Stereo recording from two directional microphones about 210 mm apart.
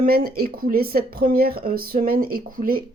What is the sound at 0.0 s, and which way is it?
Speech, 45° right (ahead or behind).